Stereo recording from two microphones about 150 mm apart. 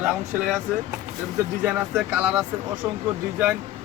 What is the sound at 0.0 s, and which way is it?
Speech, 5° right (ahead or behind).